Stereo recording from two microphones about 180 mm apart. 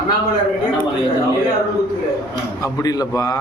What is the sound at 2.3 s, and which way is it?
A man's voice, 20° left (ahead or behind).